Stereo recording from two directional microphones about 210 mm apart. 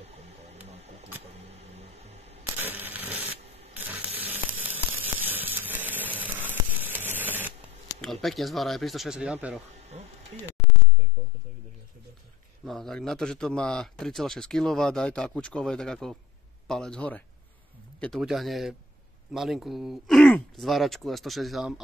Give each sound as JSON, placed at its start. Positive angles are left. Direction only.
{"t": 0.0, "sound": "a sound", "side_deg": -30}
{"t": 2.6, "sound": "tearing", "side_deg": -10}
{"t": 3.7, "sound": "sizzle", "side_deg": -10}
{"t": 7.2, "sound": "a sound", "side_deg": -10}
{"t": 8.0, "sound": "speech", "side_deg": 0}
{"t": 12.6, "sound": "speech", "side_deg": 0}